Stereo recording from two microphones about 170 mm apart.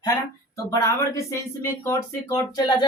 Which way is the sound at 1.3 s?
15° left (ahead or behind).